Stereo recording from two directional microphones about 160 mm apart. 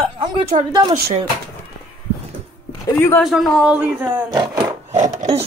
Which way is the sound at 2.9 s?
15° left (ahead or behind).